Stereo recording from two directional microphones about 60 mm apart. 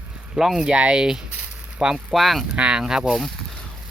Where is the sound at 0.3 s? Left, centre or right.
Centre.